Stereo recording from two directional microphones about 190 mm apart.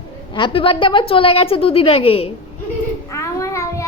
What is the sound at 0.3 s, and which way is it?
A woman's voice, 25° left (ahead or behind).